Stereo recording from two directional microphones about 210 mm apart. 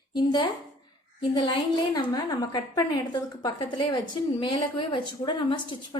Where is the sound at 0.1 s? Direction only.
20° left (ahead or behind).